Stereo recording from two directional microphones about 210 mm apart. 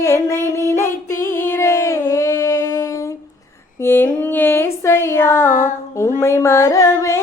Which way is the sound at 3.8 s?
10° left (ahead or behind).